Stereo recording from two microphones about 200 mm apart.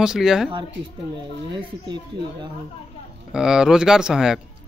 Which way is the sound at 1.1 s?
25° right (ahead or behind).